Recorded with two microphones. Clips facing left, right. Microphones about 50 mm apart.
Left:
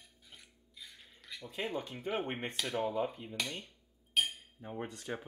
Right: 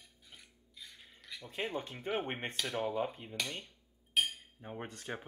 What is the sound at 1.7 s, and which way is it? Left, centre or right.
Speech, right.